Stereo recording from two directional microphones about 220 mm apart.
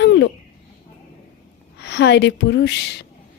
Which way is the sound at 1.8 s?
50° left (ahead or behind).